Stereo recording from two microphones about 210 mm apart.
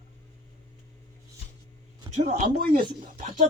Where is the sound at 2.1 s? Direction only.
35° right (ahead or behind).